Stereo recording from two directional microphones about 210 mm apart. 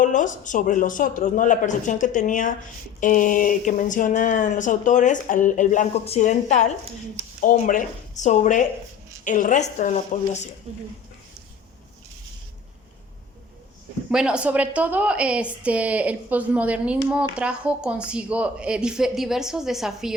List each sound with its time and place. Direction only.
0.0 s speech: 35° left (ahead or behind)
10.7 s speech: 30° right (ahead or behind)
14.1 s a woman's voice: 5° right (ahead or behind)